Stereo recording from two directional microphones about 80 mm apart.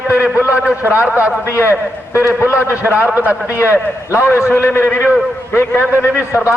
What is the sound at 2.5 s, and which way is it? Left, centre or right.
Speech, centre.